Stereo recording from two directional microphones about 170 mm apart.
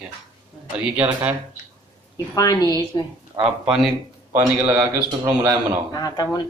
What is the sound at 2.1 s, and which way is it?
Speech, 20° left (ahead or behind).